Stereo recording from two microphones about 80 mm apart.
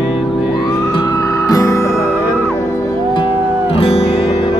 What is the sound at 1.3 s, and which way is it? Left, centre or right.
Music, left.